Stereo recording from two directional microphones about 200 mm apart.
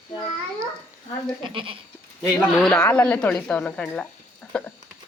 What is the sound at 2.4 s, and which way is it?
Speech, 5° left (ahead or behind).